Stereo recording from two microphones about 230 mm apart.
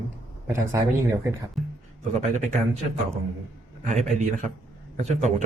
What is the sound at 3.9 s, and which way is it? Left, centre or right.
Speech, right.